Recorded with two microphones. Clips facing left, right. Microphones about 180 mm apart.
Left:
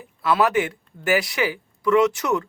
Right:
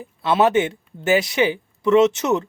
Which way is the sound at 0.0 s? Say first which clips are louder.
Right 3 dB; 25° right (ahead or behind).